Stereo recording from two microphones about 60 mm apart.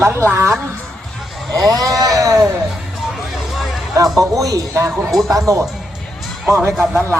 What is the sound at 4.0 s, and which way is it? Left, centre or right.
A man's voice, right.